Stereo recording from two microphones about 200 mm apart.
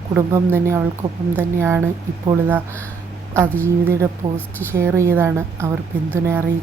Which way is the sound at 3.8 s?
15° right (ahead or behind).